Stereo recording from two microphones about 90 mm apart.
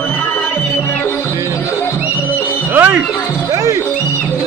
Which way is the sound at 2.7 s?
20° right (ahead or behind).